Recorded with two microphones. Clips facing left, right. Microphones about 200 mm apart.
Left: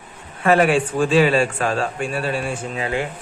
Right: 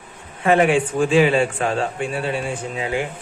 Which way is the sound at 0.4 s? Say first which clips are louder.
Even; 20° right (ahead or behind).